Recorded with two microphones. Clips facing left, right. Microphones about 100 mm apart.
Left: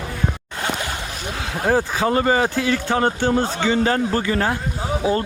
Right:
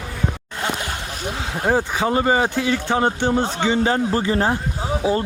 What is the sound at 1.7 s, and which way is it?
Speech, 20° right (ahead or behind).